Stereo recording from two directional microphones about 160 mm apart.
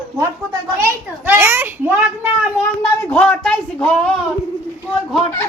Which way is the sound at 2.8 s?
10° left (ahead or behind).